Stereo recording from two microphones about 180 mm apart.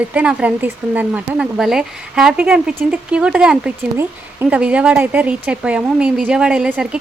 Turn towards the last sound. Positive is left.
turn(degrees=-5)  # may be behind; listen again after turning